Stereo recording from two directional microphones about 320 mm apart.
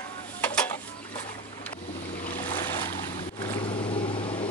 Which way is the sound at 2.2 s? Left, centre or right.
Centre.